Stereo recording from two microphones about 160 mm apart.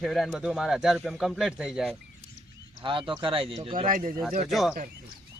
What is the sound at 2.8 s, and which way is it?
Speech, 30° right (ahead or behind).